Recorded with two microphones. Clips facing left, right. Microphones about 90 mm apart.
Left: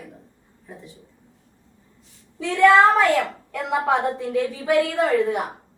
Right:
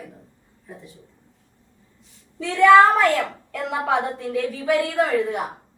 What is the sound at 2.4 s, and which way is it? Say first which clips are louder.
A woman's voice: right 2 dB; centre (ahead or behind).